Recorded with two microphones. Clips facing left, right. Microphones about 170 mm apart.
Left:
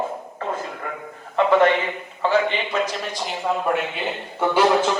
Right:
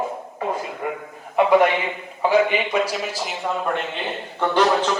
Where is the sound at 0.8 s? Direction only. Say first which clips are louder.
Right 5 dB; 15° right (ahead or behind).